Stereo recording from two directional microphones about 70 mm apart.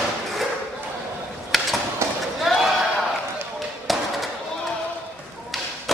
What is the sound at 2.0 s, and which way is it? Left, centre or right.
Run, right.